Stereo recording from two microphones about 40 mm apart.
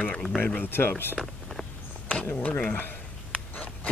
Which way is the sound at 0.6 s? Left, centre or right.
Left.